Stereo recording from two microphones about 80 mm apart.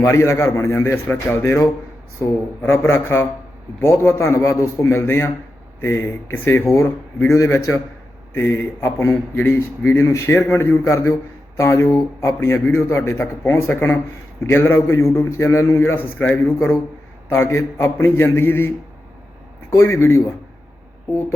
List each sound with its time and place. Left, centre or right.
0.0 s a man's voice: left
16.1 s speech: centre
16.6 s a man's voice: left
19.7 s a man's voice: left